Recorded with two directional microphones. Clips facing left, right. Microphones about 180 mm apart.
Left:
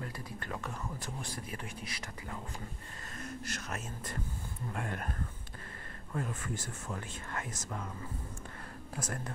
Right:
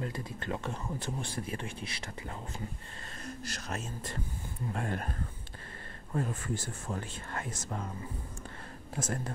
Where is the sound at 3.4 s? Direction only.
35° right (ahead or behind).